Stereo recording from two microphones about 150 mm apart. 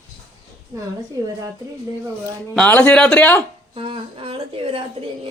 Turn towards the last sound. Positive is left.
turn(degrees=-40)  # may be behind; listen again after turning